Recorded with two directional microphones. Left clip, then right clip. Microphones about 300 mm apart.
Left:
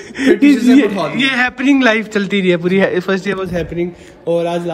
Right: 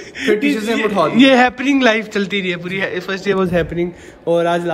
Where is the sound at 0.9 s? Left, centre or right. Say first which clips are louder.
Right 4 dB; centre.